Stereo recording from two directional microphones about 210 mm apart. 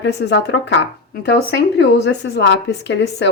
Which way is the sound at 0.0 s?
55° left (ahead or behind).